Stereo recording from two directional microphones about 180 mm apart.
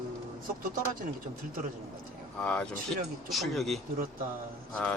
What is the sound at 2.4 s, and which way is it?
Speech, 5° left (ahead or behind).